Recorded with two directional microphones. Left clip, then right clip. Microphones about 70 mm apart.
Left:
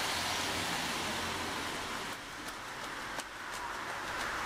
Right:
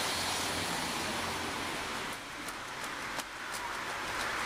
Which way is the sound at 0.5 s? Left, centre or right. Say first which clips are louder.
Even; centre.